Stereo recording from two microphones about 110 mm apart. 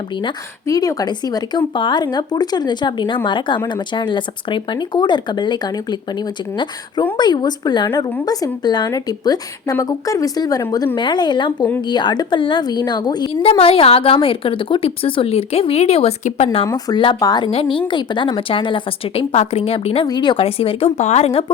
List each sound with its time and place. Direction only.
0.7 s speech: 35° left (ahead or behind)
13.4 s a woman's voice: 60° left (ahead or behind)
16.6 s speech: 35° left (ahead or behind)
17.4 s a woman's voice: 50° left (ahead or behind)
20.1 s speech: 45° left (ahead or behind)
20.4 s a woman's voice: 60° left (ahead or behind)
21.0 s speech: 90° left; by 21.5 s 60° left (ahead or behind)